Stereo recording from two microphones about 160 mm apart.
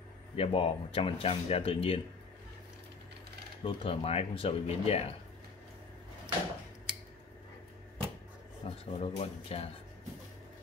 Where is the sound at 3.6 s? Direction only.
35° left (ahead or behind).